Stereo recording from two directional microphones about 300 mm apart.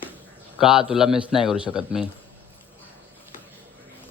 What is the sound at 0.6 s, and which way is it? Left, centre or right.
Speech, centre.